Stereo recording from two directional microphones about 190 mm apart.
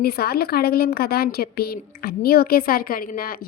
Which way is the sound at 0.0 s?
55° left (ahead or behind).